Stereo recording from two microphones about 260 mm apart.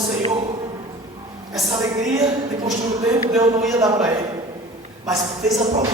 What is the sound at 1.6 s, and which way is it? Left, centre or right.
Speech, centre.